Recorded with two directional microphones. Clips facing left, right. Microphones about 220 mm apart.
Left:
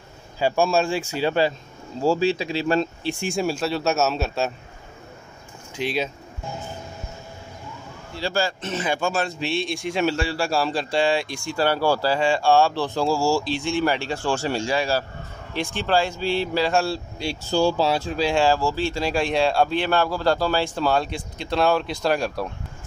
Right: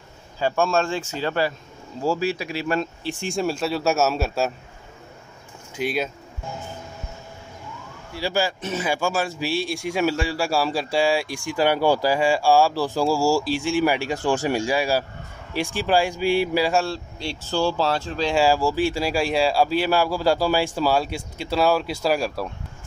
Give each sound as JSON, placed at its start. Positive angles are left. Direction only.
{"t": 0.4, "sound": "speech", "side_deg": 10}
{"t": 2.0, "sound": "speech", "side_deg": 25}
{"t": 3.2, "sound": "a man's voice", "side_deg": 5}
{"t": 5.8, "sound": "a man's voice", "side_deg": -5}
{"t": 8.1, "sound": "speech", "side_deg": -10}
{"t": 16.8, "sound": "speech", "side_deg": 10}
{"t": 18.3, "sound": "speech", "side_deg": -10}